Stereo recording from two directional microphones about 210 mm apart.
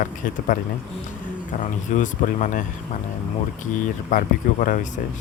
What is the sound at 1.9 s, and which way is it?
Speech, 35° left (ahead or behind).